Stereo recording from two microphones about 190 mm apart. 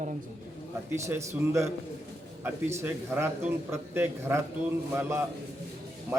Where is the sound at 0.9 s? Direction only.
15° right (ahead or behind).